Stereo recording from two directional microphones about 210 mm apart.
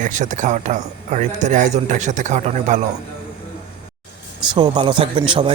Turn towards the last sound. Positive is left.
turn(degrees=-25)  # may be behind; listen again after turning